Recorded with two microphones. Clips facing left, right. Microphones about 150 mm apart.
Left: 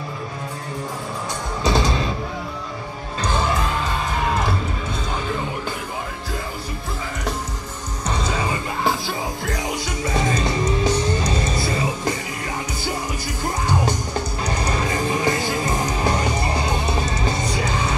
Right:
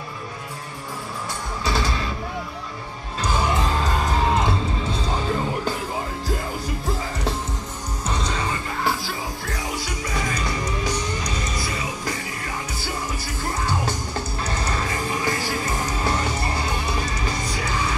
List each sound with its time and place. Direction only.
1.6 s music: 20° left (ahead or behind)
3.2 s music: 10° right (ahead or behind)
3.5 s music: 35° right (ahead or behind)
4.3 s music: 25° right (ahead or behind)
5.1 s music: 35° right (ahead or behind)
8.1 s music: 5° left (ahead or behind); by 12.2 s 25° left (ahead or behind)
13.4 s music: 15° left (ahead or behind)